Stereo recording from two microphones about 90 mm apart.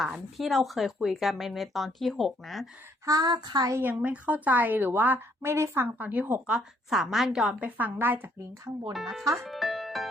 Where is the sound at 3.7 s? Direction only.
20° right (ahead or behind).